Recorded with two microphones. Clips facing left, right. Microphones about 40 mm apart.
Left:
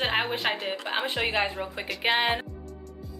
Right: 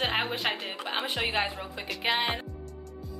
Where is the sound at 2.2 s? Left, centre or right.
Left.